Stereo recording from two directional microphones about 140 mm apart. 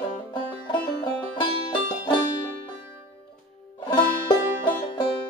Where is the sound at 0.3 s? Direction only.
35° left (ahead or behind).